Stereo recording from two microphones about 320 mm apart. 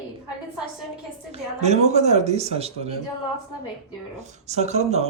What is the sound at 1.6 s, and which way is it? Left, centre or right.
Speech, right.